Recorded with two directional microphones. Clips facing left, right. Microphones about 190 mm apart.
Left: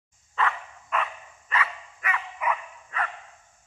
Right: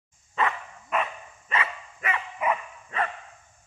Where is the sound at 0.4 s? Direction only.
20° right (ahead or behind).